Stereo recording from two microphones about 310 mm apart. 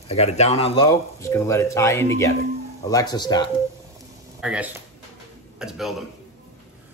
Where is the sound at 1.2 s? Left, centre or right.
Centre.